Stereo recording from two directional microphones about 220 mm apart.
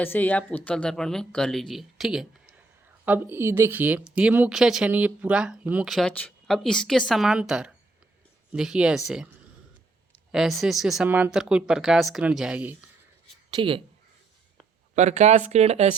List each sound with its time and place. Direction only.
0.0 s speech: 10° left (ahead or behind)
10.3 s speech: centre (ahead or behind)
13.5 s speech: 25° right (ahead or behind)
14.9 s speech: 30° right (ahead or behind)